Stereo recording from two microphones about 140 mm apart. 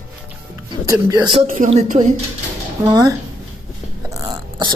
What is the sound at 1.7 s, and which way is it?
Speech, 55° right (ahead or behind).